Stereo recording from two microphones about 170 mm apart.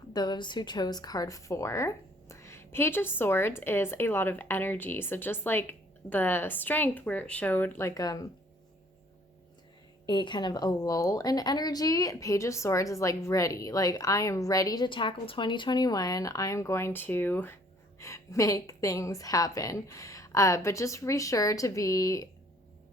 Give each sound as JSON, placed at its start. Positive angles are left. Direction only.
{"t": 0.1, "sound": "a woman's voice", "side_deg": 25}
{"t": 10.1, "sound": "a woman's voice", "side_deg": 25}